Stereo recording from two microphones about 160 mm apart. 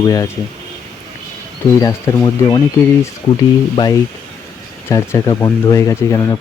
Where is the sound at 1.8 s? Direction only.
20° left (ahead or behind).